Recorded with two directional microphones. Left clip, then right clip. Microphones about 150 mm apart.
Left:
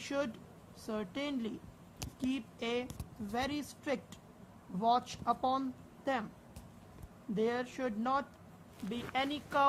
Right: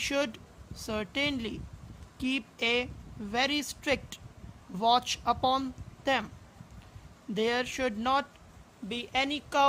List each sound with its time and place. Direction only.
0.0 s speech: 50° right (ahead or behind)
7.3 s speech: 55° right (ahead or behind)